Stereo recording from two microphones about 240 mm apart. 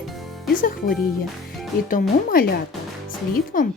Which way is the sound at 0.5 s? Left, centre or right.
Left.